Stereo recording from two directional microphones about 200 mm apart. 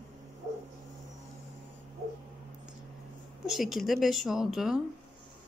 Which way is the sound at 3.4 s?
Centre (ahead or behind).